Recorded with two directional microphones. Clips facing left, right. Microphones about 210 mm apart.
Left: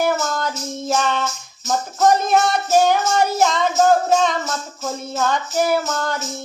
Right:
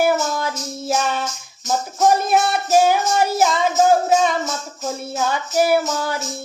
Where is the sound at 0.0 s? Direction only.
10° right (ahead or behind).